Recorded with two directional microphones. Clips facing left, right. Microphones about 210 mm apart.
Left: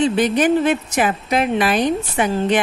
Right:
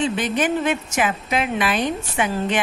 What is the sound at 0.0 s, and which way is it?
A woman's voice, 35° left (ahead or behind).